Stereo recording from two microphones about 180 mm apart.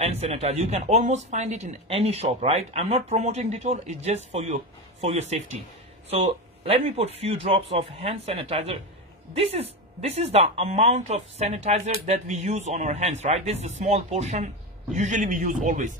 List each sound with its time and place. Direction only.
0.0 s speech: 35° right (ahead or behind)